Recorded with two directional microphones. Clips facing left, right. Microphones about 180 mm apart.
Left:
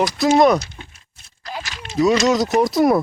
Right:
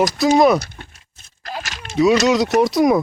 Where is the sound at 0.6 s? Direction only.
55° right (ahead or behind).